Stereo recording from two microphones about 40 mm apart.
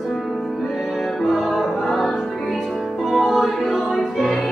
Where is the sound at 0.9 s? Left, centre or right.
Centre.